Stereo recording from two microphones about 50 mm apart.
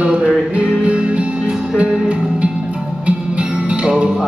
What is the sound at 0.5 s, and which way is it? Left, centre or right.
Music, right.